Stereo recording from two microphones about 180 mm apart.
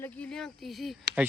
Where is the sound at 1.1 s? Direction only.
65° right (ahead or behind).